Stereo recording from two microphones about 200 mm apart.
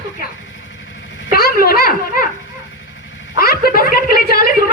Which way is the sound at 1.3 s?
45° left (ahead or behind).